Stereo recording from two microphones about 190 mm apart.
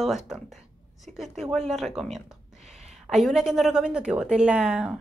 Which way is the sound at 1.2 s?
Centre (ahead or behind).